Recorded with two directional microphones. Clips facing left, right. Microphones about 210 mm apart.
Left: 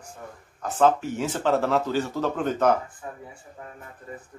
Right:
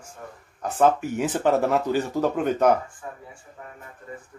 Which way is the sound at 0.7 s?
15° right (ahead or behind).